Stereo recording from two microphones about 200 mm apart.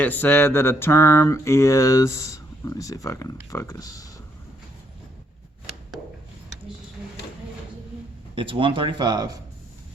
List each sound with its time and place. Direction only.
0.0 s mantra: 10° left (ahead or behind)
8.4 s speech: 25° right (ahead or behind)